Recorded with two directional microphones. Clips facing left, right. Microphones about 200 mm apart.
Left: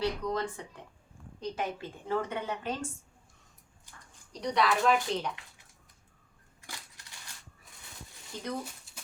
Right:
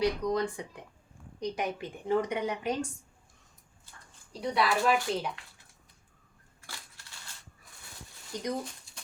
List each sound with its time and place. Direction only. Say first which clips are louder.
0.0 s a woman's voice: right 3 dB; 15° right (ahead or behind)
4.3 s a woman's voice: even; 5° right (ahead or behind)
6.6 s crushing: left 1 dB; 20° left (ahead or behind)
8.3 s a woman's voice: right 4 dB; 15° right (ahead or behind)